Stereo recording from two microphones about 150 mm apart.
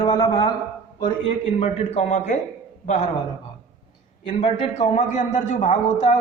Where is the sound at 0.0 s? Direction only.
30° left (ahead or behind).